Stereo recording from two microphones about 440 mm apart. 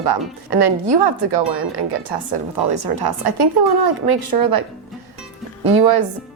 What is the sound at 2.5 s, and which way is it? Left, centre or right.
Speech, right.